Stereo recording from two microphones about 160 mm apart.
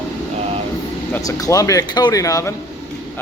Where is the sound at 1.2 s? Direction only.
20° left (ahead or behind).